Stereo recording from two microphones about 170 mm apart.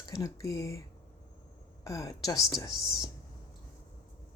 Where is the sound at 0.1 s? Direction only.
20° left (ahead or behind).